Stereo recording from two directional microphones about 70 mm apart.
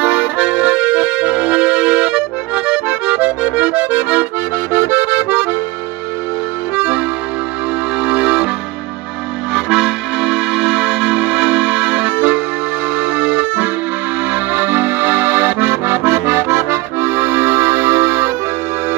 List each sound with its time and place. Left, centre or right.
0.0 s accordion: right
8.0 s music: centre
9.5 s music: centre
14.3 s accordion: right